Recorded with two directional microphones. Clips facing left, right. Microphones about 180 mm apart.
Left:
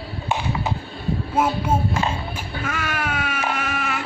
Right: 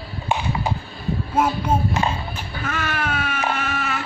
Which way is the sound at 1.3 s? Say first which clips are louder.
Right 1 dB; 5° left (ahead or behind).